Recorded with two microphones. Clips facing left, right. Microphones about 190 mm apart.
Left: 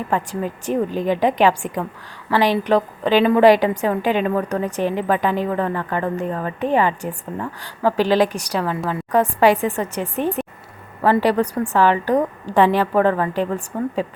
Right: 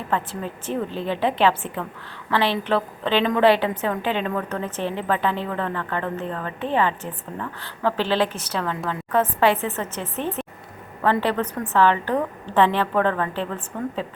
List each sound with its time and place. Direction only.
0.1 s a woman's voice: 15° left (ahead or behind)
13.7 s speech: 35° left (ahead or behind)